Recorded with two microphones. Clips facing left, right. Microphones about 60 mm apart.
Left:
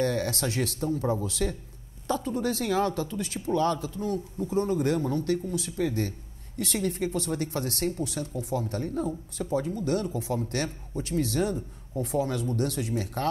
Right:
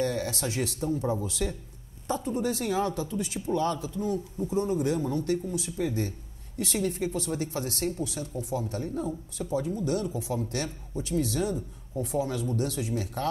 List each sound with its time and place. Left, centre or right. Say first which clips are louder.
0.0 s speech: left 2 dB; left